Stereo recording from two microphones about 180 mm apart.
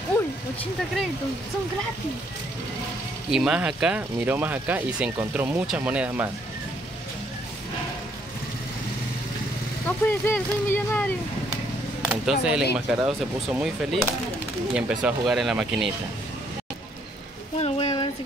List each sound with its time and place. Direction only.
3.3 s speech: 5° right (ahead or behind)
9.8 s speech: 10° left (ahead or behind)
12.1 s speech: 5° right (ahead or behind)
17.6 s speech: 35° left (ahead or behind)